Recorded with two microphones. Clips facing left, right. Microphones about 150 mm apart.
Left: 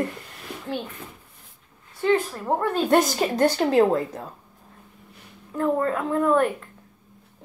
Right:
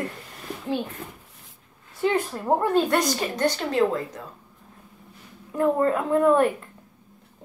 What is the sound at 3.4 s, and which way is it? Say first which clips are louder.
Speech: left 4 dB; 40° left (ahead or behind).